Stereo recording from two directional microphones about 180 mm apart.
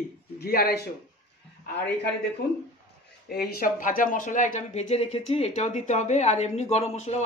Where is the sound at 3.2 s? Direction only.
60° left (ahead or behind).